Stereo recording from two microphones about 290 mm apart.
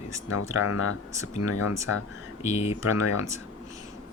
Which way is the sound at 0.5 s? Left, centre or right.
Left.